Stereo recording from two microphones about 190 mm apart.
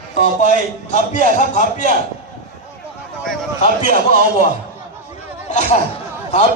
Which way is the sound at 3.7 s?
50° right (ahead or behind).